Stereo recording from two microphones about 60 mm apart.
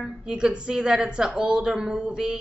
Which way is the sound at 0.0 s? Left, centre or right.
Centre.